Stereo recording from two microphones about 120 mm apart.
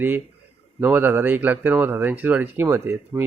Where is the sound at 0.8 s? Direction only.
15° right (ahead or behind).